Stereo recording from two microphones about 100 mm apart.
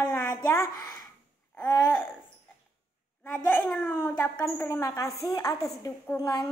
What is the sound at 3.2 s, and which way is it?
A child's voice, 20° left (ahead or behind).